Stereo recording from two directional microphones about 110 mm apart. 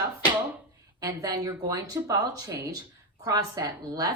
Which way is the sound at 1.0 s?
35° right (ahead or behind).